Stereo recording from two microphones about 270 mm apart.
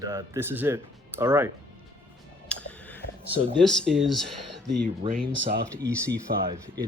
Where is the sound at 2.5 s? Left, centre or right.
Centre.